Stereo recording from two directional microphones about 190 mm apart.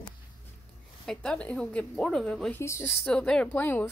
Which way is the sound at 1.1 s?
5° left (ahead or behind).